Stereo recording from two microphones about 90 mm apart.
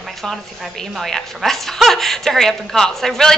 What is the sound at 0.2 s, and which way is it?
A woman's voice, 5° left (ahead or behind).